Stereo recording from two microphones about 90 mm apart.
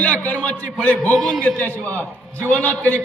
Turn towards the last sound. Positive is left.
turn(degrees=15)  # may be behind; listen again after turning